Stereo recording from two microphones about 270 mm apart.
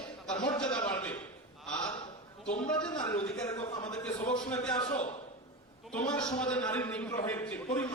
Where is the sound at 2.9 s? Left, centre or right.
Centre.